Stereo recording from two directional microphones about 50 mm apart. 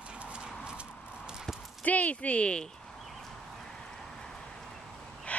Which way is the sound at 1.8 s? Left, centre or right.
Left.